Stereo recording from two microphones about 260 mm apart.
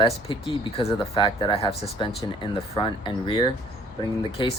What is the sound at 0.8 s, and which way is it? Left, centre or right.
Speech, centre.